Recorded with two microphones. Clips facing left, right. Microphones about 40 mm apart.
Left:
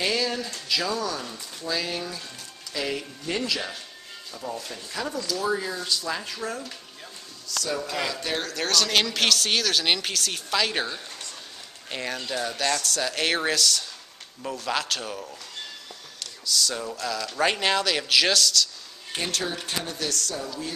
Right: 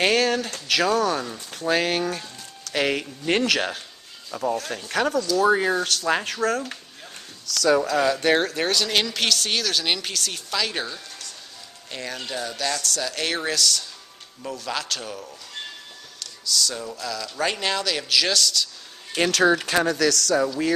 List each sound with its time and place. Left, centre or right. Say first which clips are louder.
0.0 s speech: right 6 dB; right
4.3 s speech: right 9 dB; right
4.6 s speech: right 8 dB; right
7.7 s speech: right 10 dB; right
8.0 s speech: right 9 dB; right
8.5 s speech: right 1 dB; centre
16.2 s a sound: right 1 dB; centre
17.0 s speech: left 2 dB; centre
19.1 s speech: right 10 dB; right